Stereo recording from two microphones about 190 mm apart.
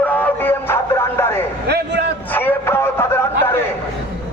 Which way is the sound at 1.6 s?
60° right (ahead or behind).